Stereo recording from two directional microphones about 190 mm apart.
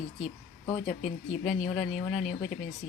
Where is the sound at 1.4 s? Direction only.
Centre (ahead or behind).